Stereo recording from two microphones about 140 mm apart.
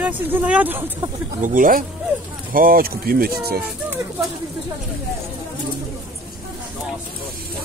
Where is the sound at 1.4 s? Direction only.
80° right.